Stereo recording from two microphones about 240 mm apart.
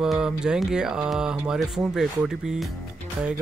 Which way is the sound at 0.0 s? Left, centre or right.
Centre.